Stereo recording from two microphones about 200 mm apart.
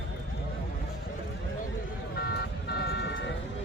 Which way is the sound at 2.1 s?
55° left (ahead or behind).